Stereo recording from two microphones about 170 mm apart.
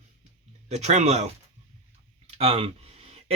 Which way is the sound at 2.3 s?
35° right (ahead or behind).